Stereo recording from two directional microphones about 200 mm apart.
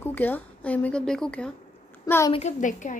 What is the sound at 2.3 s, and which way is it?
Speech, 35° left (ahead or behind).